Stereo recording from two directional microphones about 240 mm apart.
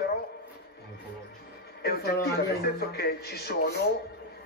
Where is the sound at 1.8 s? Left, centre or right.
Left.